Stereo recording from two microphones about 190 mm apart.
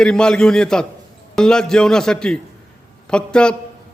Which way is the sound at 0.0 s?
5° left (ahead or behind).